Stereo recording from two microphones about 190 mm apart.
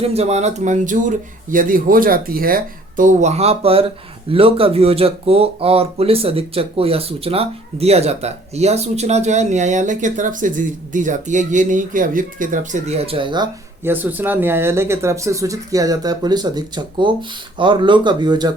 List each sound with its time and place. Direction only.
0.0 s speech: 35° right (ahead or behind)
13.8 s speech: 10° right (ahead or behind)